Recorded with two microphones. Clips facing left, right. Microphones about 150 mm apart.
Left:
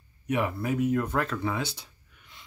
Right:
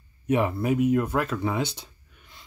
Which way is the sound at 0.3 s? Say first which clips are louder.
Right 4 dB; 25° right (ahead or behind).